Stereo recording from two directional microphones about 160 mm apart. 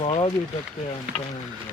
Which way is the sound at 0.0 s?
35° left (ahead or behind).